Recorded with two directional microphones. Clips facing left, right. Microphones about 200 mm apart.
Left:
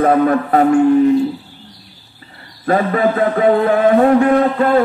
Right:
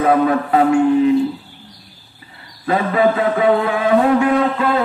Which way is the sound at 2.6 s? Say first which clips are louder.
Left 1 dB; 45° left (ahead or behind).